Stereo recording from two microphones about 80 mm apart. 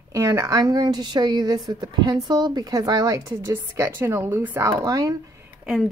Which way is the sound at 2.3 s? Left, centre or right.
Right.